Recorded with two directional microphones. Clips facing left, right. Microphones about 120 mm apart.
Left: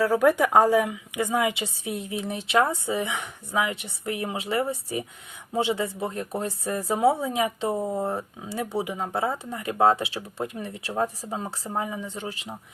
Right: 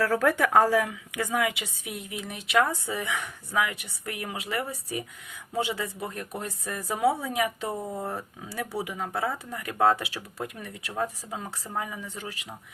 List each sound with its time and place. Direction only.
0.0 s speech: 15° left (ahead or behind)